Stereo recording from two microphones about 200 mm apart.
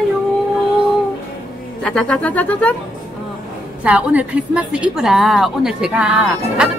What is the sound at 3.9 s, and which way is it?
A woman's voice, 5° right (ahead or behind).